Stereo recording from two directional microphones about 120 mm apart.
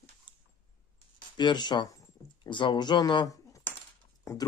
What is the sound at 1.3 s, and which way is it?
Speech, 40° left (ahead or behind).